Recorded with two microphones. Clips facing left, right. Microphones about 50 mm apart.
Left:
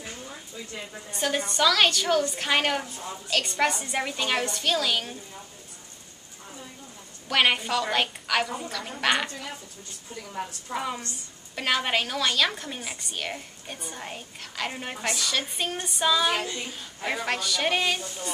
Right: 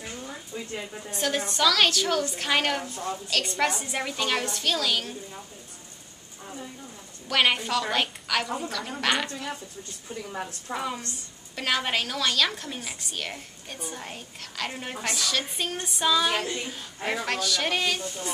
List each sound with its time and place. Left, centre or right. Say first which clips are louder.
0.5 s a sound: right 5 dB; right
1.1 s a woman's voice: left 1 dB; centre
7.2 s a woman's voice: left 1 dB; centre
10.7 s a woman's voice: even; centre